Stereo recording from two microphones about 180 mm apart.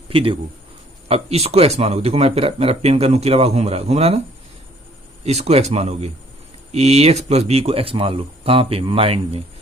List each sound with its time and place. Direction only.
0.1 s speech: 30° right (ahead or behind)
5.2 s speech: 35° right (ahead or behind)